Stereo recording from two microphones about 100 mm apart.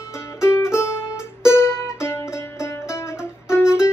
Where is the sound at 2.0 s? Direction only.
25° left (ahead or behind).